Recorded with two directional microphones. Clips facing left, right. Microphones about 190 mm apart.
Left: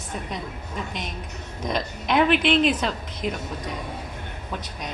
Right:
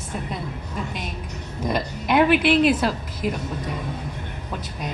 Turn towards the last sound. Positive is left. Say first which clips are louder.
# right 3 dB
turn(degrees=-5)  # may be behind; listen again after turning